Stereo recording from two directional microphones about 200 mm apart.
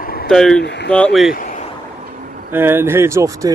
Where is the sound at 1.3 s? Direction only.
40° left (ahead or behind).